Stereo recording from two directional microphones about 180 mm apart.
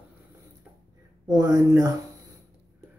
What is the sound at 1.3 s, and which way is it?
Speech, 20° right (ahead or behind).